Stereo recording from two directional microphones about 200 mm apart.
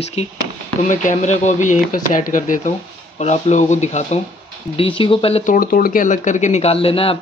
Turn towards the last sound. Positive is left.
turn(degrees=30)  # may be behind; listen again after turning